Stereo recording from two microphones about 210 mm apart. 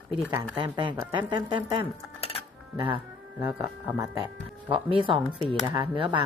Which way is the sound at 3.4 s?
15° right (ahead or behind).